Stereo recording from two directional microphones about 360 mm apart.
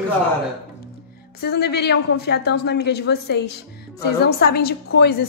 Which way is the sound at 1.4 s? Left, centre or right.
Left.